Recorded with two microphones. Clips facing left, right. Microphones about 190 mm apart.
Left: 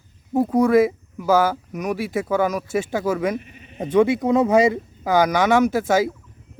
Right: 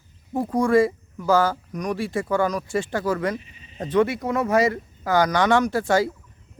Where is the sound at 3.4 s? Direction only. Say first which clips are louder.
Left 7 dB; 60° left (ahead or behind).